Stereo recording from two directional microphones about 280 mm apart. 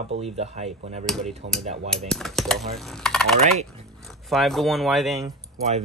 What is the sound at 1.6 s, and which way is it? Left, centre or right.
Speech, right.